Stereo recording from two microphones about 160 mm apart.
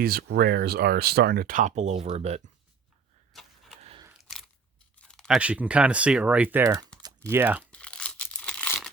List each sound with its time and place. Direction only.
0.0 s speech: 75° right (ahead or behind); by 2.4 s 40° right (ahead or behind)
3.3 s vehicle: centre (ahead or behind)
3.8 s biting: 40° right (ahead or behind)
4.2 s biting: centre (ahead or behind)
4.9 s a sound: 5° left (ahead or behind)
5.4 s speech: 10° right (ahead or behind)
7.0 s typing: 15° right (ahead or behind)
7.7 s tearing: 5° left (ahead or behind)